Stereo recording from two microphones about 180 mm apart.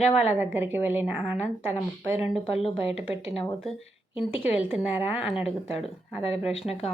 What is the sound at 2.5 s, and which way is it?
Speech, 35° left (ahead or behind).